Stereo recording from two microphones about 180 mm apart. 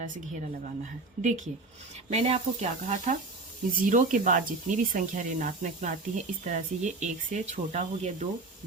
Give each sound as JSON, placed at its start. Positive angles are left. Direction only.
{"t": 1.2, "sound": "speech", "side_deg": -45}